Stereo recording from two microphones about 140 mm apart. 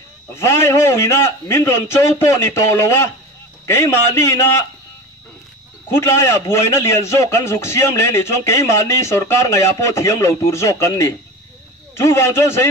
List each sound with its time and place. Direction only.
0.3 s a man's voice: 20° left (ahead or behind)
5.9 s a man's voice: 20° left (ahead or behind)